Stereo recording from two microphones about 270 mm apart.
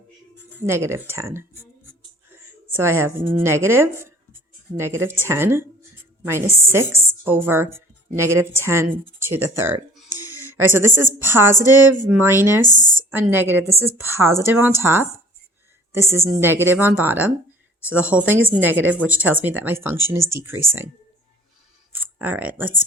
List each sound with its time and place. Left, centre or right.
0.6 s a woman's voice: centre
12.6 s speech: left
13.0 s a woman's voice: centre
21.9 s speech: centre